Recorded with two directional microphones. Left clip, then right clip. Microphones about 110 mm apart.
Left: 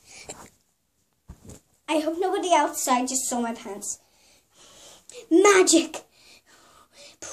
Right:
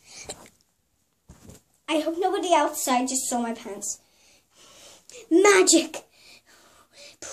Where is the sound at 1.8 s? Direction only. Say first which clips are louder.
Even; 25° left (ahead or behind).